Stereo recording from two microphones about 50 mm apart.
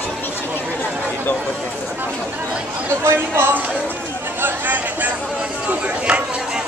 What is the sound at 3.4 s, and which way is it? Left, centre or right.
Music, right.